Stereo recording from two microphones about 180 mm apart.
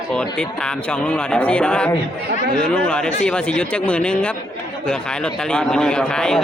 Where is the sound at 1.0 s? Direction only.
5° left (ahead or behind).